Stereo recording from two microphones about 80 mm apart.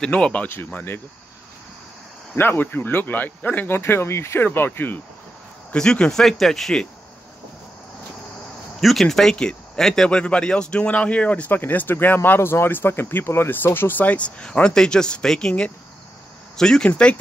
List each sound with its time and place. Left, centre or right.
0.0 s speech: centre
2.3 s speech: left
5.7 s speech: centre
8.8 s speech: centre